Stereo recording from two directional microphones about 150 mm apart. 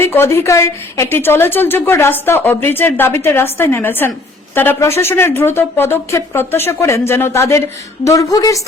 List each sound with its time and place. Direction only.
0.0 s a woman's voice: 15° left (ahead or behind)